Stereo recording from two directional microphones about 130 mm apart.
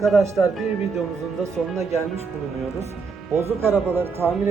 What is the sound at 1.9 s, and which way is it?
Speech, 55° right (ahead or behind).